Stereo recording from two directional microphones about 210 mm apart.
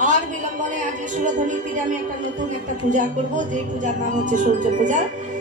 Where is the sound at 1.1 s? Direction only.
35° right (ahead or behind).